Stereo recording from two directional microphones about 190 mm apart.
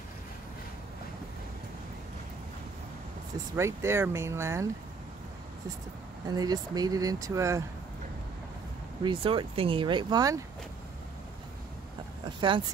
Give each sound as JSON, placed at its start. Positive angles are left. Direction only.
{"t": 3.5, "sound": "speech", "side_deg": -15}
{"t": 6.2, "sound": "speech", "side_deg": -20}
{"t": 9.0, "sound": "speech", "side_deg": -25}
{"t": 12.4, "sound": "speech", "side_deg": -25}